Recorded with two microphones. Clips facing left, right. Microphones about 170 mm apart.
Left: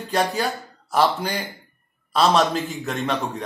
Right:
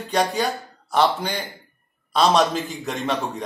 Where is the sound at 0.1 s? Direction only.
5° left (ahead or behind).